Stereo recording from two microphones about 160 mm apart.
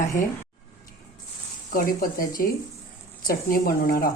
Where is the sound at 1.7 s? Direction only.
60° left (ahead or behind).